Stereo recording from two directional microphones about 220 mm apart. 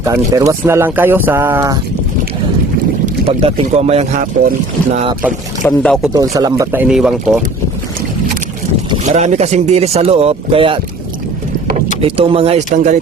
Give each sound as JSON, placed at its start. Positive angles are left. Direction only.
{"t": 0.0, "sound": "speech", "side_deg": -15}
{"t": 3.2, "sound": "speech", "side_deg": -25}
{"t": 5.6, "sound": "speech", "side_deg": 5}
{"t": 6.1, "sound": "speech", "side_deg": -15}
{"t": 9.0, "sound": "speech", "side_deg": -30}
{"t": 12.0, "sound": "speech", "side_deg": -25}